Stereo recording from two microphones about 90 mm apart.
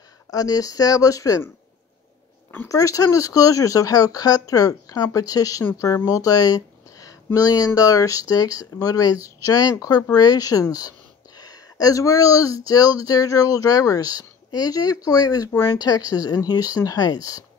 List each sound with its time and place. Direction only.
0.3 s speech: 40° left (ahead or behind)
2.7 s speech: 40° left (ahead or behind)
6.0 s a sound: 40° left (ahead or behind)
7.3 s speech: 40° left (ahead or behind)
16.1 s speech: 45° left (ahead or behind)